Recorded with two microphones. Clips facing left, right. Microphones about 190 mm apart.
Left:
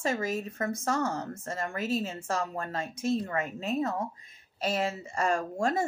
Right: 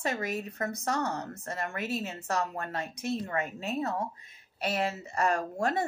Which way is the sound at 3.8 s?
50° left (ahead or behind).